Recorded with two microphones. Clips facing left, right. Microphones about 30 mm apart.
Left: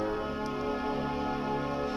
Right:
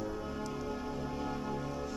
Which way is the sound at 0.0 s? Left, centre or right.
Left.